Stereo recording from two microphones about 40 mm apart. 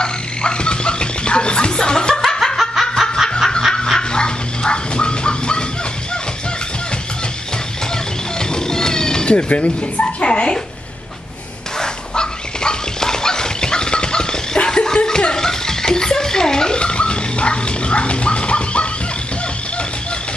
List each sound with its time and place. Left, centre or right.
0.0 s music: left
2.5 s snicker: centre
4.1 s dog: left
7.9 s cat: centre
11.8 s dog: centre
15.0 s music: centre